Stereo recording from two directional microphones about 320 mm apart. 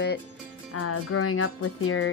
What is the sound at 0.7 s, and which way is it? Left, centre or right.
Speech, left.